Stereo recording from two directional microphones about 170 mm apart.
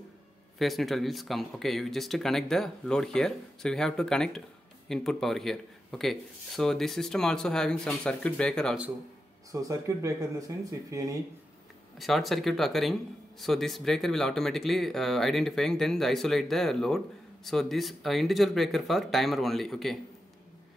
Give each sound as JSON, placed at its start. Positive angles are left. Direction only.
{"t": 0.6, "sound": "speech", "side_deg": 0}
{"t": 9.5, "sound": "speech", "side_deg": -20}
{"t": 12.0, "sound": "speech", "side_deg": 0}